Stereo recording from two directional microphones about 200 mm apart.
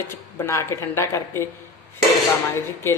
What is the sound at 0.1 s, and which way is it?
Speech, 15° left (ahead or behind).